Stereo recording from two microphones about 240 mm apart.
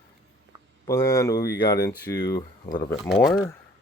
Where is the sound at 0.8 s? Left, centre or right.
Centre.